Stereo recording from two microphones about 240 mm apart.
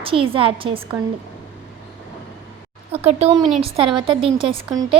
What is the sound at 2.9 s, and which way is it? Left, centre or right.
A woman's voice, right.